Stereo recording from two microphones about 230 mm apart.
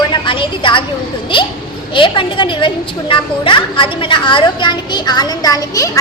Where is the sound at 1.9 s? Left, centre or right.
Left.